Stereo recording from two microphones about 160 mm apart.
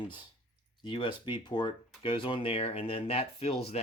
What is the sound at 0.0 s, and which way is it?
Speech, 30° left (ahead or behind).